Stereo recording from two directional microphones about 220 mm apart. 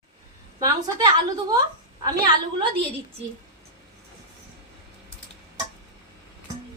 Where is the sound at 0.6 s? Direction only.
20° right (ahead or behind).